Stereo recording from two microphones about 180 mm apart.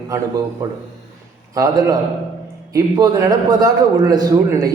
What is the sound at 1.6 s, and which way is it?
A man's voice, 20° right (ahead or behind).